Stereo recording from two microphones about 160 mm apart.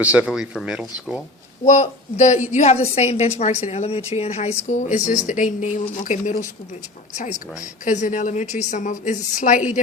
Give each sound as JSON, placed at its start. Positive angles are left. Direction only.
{"t": 0.0, "sound": "speech", "side_deg": -10}
{"t": 1.6, "sound": "a woman's voice", "side_deg": 45}